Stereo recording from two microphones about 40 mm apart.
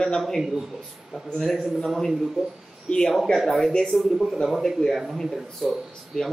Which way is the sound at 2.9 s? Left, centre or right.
Left.